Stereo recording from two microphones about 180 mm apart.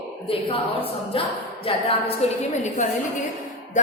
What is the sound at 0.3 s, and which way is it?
A woman's voice, 30° left (ahead or behind).